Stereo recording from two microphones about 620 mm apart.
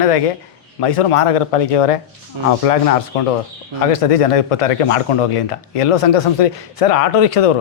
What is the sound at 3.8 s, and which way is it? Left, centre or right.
Speech, left.